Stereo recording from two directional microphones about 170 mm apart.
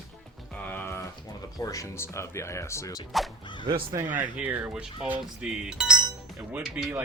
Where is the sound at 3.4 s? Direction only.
25° left (ahead or behind).